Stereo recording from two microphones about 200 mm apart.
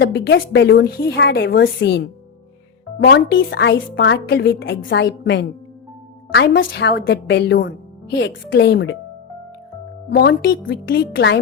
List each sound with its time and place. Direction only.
0.0 s a woman's voice: 60° left (ahead or behind)
10.1 s speech: 55° left (ahead or behind)